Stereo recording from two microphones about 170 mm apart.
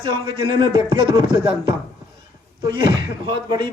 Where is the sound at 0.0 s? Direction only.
25° right (ahead or behind).